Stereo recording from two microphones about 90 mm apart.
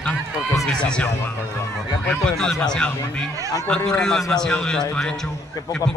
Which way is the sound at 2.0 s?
5° left (ahead or behind).